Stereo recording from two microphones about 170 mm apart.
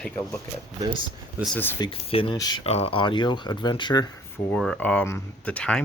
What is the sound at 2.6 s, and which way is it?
Speech, 35° left (ahead or behind).